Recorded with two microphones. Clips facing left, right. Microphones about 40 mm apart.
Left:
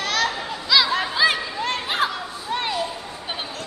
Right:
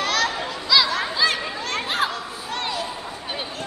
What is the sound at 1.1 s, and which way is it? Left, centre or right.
Chatter, centre.